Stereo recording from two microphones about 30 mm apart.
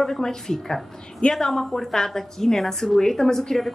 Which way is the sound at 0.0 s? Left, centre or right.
Centre.